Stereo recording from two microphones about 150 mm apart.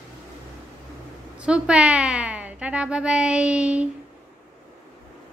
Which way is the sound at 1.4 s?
5° right (ahead or behind).